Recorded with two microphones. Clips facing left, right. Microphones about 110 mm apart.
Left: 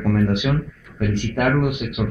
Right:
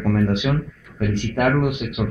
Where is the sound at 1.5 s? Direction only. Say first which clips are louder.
Even; 30° right (ahead or behind).